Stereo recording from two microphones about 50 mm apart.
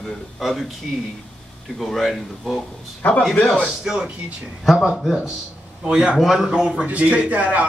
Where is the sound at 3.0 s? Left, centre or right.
Left.